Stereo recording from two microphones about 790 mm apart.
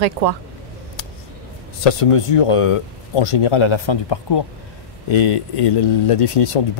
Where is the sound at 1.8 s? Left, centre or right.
Left.